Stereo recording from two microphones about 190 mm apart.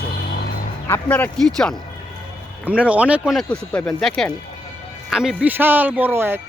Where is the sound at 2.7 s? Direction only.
5° right (ahead or behind).